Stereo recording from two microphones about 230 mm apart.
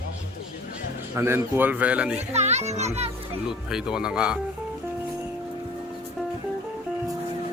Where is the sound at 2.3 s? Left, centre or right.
Right.